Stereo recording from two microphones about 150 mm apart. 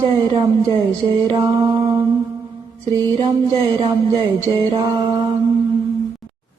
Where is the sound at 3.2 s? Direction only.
35° right (ahead or behind).